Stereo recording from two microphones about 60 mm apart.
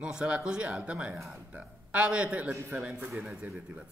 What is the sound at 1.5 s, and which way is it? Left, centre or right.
Speech, centre.